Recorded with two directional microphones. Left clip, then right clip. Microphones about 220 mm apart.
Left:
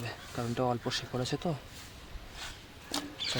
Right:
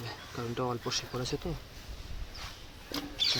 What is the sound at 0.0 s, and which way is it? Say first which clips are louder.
Speech: left 1 dB; 30° left (ahead or behind).